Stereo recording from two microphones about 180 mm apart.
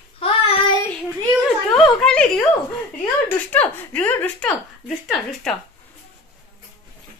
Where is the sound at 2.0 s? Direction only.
5° left (ahead or behind).